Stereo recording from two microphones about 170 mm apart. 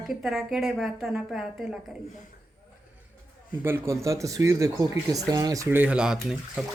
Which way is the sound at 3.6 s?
15° right (ahead or behind).